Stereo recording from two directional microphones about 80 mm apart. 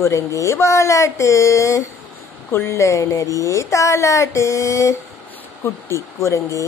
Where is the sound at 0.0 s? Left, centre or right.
Left.